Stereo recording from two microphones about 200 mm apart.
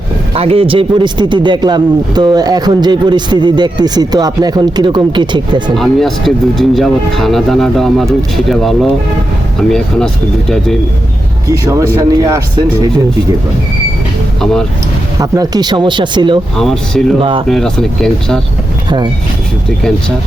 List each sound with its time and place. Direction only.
0.3 s speech: 30° right (ahead or behind)
5.7 s speech: centre (ahead or behind)
11.6 s speech: 15° right (ahead or behind)
15.2 s speech: 20° right (ahead or behind)
16.6 s speech: centre (ahead or behind)